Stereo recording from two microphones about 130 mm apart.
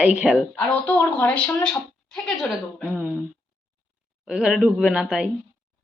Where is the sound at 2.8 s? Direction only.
10° right (ahead or behind).